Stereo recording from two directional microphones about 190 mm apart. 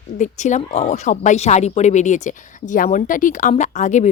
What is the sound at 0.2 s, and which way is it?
A woman's voice, 40° left (ahead or behind).